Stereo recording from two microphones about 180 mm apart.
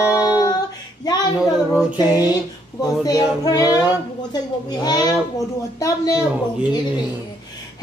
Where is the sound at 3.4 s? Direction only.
20° left (ahead or behind).